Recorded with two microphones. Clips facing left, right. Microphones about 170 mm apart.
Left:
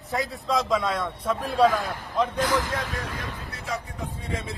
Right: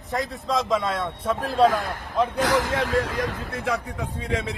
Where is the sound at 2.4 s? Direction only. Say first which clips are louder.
Right 4 dB; 90° right.